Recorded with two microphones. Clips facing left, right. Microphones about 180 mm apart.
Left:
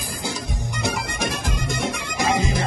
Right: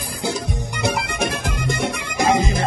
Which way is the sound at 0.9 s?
60° right (ahead or behind).